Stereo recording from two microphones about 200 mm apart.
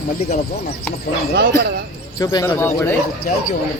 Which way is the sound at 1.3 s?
60° right (ahead or behind).